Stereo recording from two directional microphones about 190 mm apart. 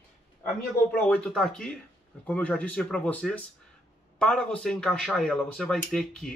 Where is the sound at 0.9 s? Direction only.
5° left (ahead or behind).